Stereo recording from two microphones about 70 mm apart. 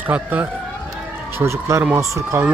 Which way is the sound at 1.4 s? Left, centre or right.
Right.